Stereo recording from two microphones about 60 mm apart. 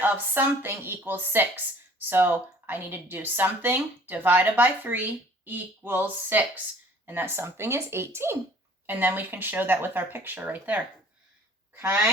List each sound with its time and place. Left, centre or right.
0.0 s speech: right
8.9 s speech: right